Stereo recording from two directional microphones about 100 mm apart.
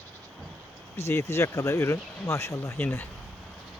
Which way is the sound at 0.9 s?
25° left (ahead or behind).